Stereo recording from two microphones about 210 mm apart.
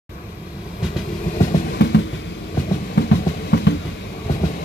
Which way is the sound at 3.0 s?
50° left (ahead or behind).